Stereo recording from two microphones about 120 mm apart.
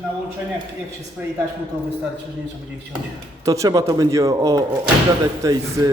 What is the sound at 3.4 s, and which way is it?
Speech, 25° right (ahead or behind).